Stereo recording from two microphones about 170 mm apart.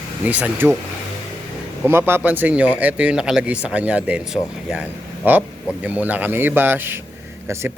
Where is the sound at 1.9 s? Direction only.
15° right (ahead or behind).